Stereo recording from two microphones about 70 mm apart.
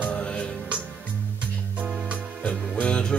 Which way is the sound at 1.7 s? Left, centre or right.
Centre.